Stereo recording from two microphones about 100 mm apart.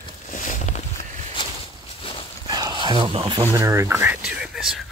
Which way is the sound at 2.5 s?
45° right (ahead or behind).